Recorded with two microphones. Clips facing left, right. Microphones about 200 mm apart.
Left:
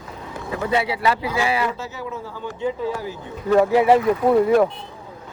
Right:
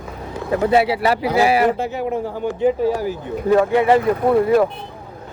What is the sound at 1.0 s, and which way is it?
Speech, 35° right (ahead or behind).